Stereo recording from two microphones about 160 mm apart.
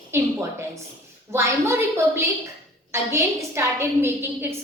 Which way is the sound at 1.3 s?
15° right (ahead or behind).